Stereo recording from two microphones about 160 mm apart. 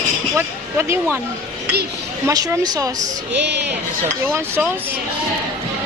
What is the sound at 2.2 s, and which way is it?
Speech, 20° right (ahead or behind).